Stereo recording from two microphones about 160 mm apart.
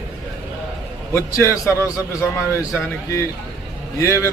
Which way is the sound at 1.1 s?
15° left (ahead or behind).